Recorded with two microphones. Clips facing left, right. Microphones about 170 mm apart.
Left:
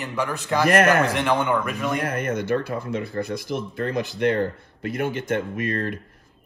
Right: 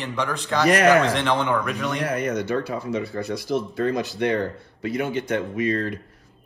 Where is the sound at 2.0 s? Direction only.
50° left (ahead or behind).